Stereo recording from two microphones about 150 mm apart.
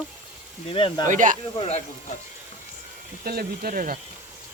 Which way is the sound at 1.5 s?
45° left (ahead or behind).